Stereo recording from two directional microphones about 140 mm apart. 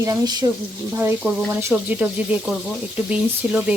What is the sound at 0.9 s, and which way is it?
Speech, 15° right (ahead or behind).